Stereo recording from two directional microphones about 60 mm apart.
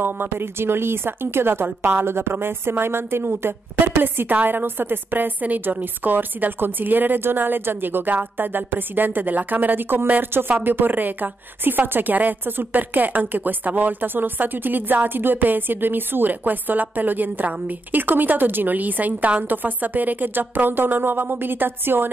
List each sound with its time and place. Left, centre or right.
0.0 s a woman's voice: right